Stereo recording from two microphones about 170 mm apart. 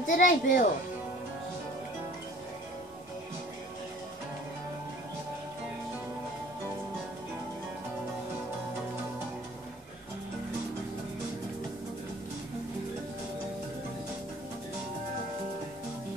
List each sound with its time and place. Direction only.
0.0 s speech: 50° left (ahead or behind)